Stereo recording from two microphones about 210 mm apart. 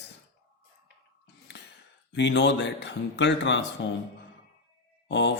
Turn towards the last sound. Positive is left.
turn(degrees=55)  # may be behind; listen again after turning